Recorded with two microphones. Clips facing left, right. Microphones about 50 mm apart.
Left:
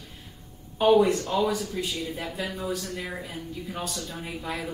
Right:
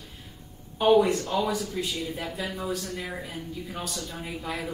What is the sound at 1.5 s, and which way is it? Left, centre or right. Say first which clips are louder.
Speech: even; centre.